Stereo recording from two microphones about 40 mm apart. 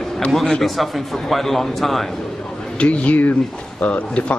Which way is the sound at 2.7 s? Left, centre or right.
Left.